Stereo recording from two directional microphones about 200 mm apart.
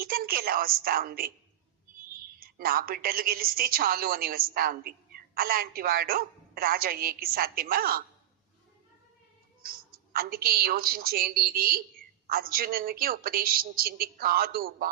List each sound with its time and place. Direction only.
0.0 s a woman's voice: 50° right (ahead or behind)
9.6 s a woman's voice: 45° right (ahead or behind)